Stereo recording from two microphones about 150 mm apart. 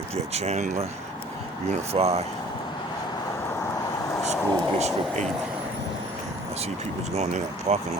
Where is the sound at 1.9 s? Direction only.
45° right (ahead or behind).